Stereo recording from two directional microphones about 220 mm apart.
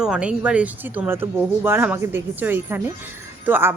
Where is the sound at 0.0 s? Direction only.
5° right (ahead or behind).